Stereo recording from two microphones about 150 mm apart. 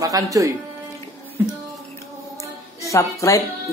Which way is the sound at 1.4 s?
15° right (ahead or behind).